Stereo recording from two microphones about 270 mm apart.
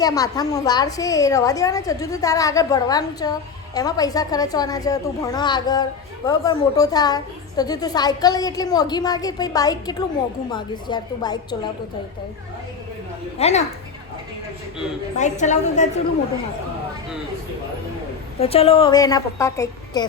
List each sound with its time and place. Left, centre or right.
0.0 s a woman's voice: centre
13.4 s a woman's voice: left
15.2 s a woman's voice: left
18.3 s a woman's voice: left